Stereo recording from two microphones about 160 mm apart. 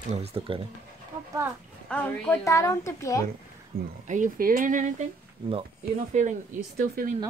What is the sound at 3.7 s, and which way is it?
Speech, 65° right (ahead or behind).